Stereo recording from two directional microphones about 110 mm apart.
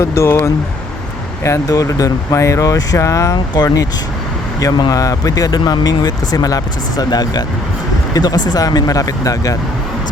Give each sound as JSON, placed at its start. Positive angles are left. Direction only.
{"t": 0.0, "sound": "speech", "side_deg": 25}
{"t": 3.3, "sound": "speech", "side_deg": 40}